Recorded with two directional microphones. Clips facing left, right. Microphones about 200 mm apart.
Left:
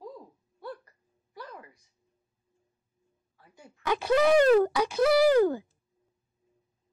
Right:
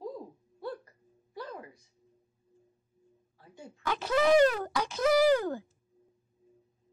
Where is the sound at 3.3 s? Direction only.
25° right (ahead or behind).